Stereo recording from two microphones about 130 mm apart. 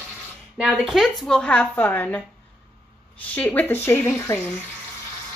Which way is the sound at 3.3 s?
10° left (ahead or behind).